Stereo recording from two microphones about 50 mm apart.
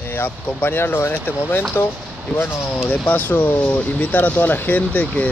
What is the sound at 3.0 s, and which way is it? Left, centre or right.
Speech, left.